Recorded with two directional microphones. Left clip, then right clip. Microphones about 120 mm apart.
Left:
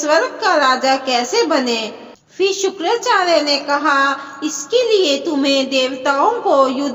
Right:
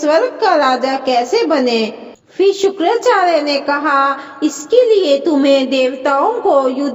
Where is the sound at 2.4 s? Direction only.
50° right (ahead or behind).